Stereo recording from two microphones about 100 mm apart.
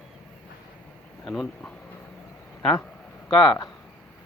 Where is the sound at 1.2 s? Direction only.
Centre (ahead or behind).